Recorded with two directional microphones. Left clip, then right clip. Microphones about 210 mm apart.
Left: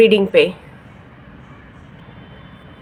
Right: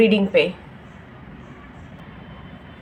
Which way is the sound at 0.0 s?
40° left (ahead or behind).